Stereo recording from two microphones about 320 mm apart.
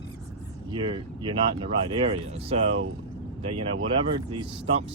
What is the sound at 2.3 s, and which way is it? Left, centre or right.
Speech, centre.